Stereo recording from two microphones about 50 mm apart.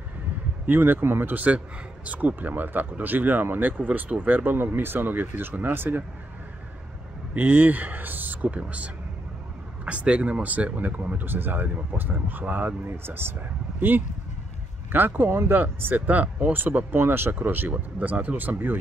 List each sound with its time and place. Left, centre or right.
0.7 s speech: right
1.3 s speech: right
7.3 s speech: right
12.8 s speech: right
17.6 s speech: right